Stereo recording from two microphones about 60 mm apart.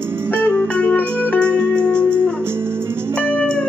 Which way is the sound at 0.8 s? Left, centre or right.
Left.